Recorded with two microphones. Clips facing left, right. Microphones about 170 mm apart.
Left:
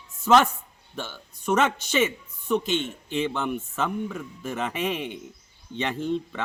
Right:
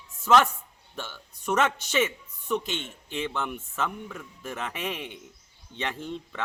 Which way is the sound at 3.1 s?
5° right (ahead or behind).